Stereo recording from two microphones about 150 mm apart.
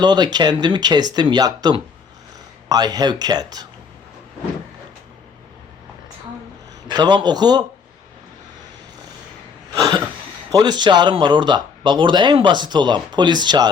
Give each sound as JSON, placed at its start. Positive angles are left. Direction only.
{"t": 0.0, "sound": "speech", "side_deg": -30}
{"t": 6.8, "sound": "a man's voice", "side_deg": -30}
{"t": 9.7, "sound": "a sound", "side_deg": -25}
{"t": 10.5, "sound": "speech", "side_deg": -30}